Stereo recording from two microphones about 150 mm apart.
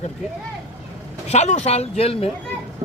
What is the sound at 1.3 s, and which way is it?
Speech, 45° left (ahead or behind).